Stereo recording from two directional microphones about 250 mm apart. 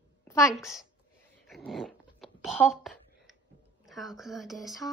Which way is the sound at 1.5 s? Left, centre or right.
Centre.